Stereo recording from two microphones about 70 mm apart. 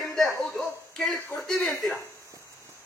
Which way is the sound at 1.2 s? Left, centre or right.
Left.